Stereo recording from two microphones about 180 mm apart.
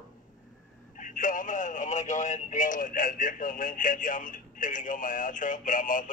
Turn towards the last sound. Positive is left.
turn(degrees=45)  # may be behind; listen again after turning